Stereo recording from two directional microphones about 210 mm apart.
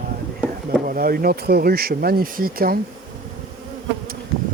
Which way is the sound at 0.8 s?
45° right (ahead or behind).